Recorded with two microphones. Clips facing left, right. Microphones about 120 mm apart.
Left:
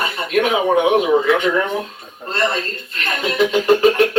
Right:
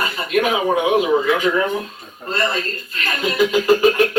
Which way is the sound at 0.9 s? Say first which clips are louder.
Left 2 dB; 25° left (ahead or behind).